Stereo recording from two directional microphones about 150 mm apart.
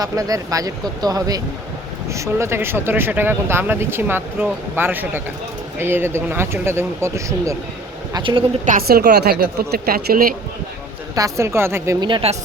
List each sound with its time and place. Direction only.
0.0 s speech: 25° right (ahead or behind)
8.1 s a woman's voice: 35° right (ahead or behind)
8.6 s a woman's voice: 75° right (ahead or behind)
11.1 s speech: 20° right (ahead or behind)
11.9 s a woman's voice: 30° right (ahead or behind)